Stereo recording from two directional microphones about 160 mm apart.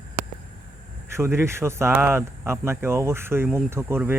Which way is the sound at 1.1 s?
15° right (ahead or behind).